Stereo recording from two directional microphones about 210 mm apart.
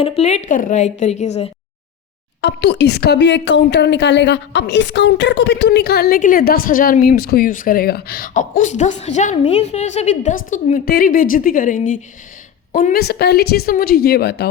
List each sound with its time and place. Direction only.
0.0 s a woman's voice: 30° left (ahead or behind)
2.4 s a woman's voice: 55° left (ahead or behind)